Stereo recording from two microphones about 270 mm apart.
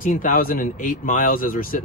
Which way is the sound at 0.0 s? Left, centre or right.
Left.